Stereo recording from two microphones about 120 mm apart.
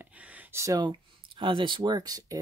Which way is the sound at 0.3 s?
20° right (ahead or behind).